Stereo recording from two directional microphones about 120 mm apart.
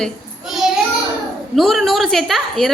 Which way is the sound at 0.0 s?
Centre (ahead or behind).